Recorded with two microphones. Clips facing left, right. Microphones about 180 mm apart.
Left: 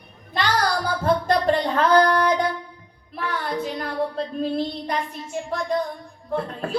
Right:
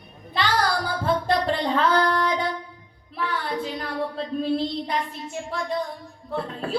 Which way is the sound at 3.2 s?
45° left (ahead or behind).